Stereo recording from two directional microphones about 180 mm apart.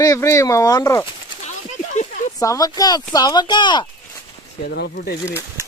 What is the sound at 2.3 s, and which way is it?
Speech, 20° left (ahead or behind).